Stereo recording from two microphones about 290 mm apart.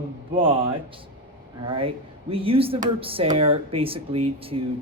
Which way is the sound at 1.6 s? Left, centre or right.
Centre.